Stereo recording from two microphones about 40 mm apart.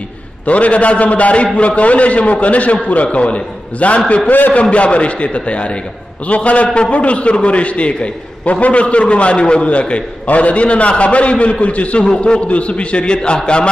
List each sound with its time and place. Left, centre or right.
0.5 s a man's voice: left
4.3 s a man's voice: left
4.6 s a man's voice: left